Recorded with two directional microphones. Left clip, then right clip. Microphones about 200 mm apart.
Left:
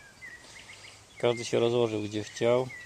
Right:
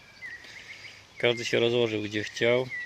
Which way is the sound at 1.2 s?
Centre (ahead or behind).